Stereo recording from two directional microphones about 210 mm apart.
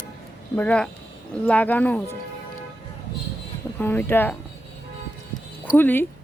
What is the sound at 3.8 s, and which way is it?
Speech, 10° left (ahead or behind).